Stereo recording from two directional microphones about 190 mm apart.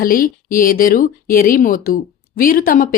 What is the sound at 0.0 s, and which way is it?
A woman's voice, 50° left (ahead or behind).